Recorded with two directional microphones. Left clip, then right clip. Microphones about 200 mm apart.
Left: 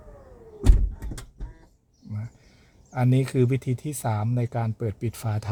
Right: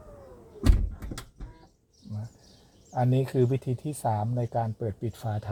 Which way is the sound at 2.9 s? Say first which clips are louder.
Left 1 dB; 20° left (ahead or behind).